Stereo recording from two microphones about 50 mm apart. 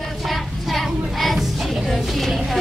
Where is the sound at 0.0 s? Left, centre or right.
Centre.